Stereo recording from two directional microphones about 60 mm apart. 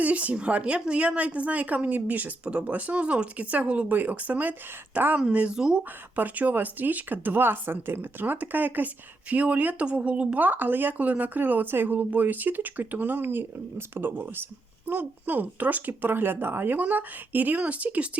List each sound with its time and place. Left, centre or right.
0.0 s a woman's voice: right
6.1 s a woman's voice: right